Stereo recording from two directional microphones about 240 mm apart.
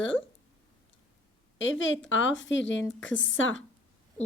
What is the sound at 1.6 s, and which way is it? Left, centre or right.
Speech, left.